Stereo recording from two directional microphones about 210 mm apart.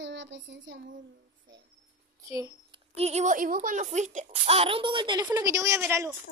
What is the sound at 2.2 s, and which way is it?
Speech, 15° right (ahead or behind).